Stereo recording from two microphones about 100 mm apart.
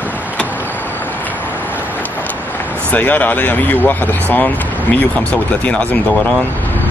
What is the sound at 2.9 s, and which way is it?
Speech, 15° left (ahead or behind).